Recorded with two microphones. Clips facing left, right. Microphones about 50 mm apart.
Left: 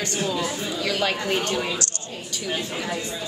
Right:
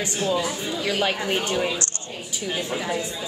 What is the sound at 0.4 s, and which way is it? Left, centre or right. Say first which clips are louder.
A woman's voice: even; centre.